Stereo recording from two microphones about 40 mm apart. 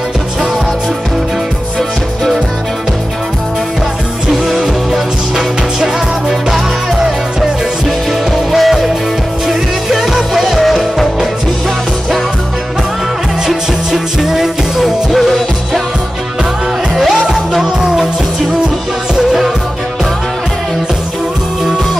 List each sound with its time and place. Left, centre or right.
4.3 s music: centre
8.5 s music: centre
13.5 s music: centre
15.1 s music: centre
17.7 s music: centre
19.1 s music: centre